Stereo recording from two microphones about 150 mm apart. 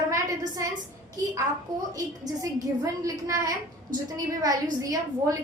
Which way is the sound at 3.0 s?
20° right (ahead or behind).